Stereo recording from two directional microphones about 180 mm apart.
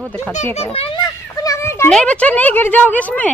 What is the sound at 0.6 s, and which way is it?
Speech, 30° left (ahead or behind).